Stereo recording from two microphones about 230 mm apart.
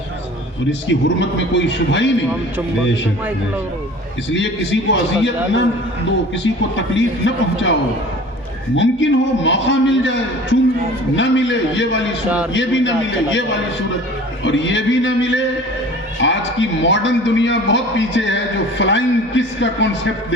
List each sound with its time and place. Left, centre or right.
0.7 s a man's voice: left
4.3 s a man's voice: left
6.9 s a man's voice: left
14.4 s a man's voice: left